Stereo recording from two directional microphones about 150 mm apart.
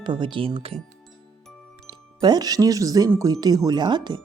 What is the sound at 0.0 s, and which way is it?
Speech, 35° right (ahead or behind).